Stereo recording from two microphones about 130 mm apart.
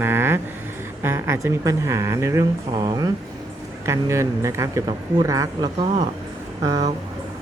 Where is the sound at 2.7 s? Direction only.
35° right (ahead or behind).